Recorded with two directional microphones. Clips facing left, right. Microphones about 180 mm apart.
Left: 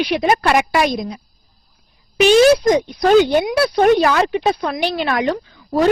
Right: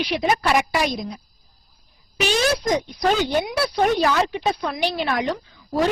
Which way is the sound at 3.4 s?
60° left (ahead or behind).